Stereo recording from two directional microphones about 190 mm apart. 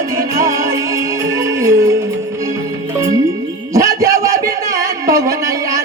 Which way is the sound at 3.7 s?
15° right (ahead or behind).